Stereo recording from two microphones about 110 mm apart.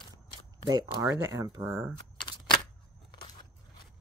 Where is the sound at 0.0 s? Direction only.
45° left (ahead or behind).